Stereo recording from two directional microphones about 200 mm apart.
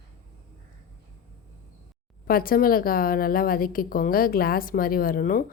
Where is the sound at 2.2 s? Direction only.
45° left (ahead or behind).